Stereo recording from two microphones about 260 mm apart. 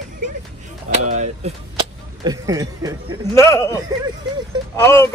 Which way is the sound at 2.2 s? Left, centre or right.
Centre.